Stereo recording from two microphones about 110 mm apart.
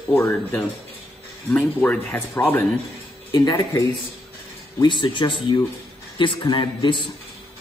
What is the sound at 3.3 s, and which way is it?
Speech, 40° left (ahead or behind).